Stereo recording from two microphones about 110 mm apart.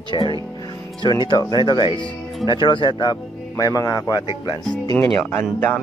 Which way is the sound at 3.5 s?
30° left (ahead or behind).